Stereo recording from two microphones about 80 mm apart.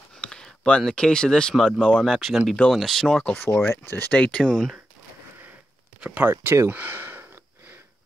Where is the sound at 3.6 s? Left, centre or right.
Left.